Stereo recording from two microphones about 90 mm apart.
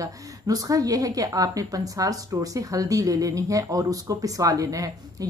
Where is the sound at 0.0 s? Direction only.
40° right (ahead or behind).